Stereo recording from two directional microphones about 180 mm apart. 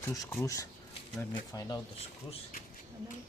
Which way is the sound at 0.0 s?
15° left (ahead or behind).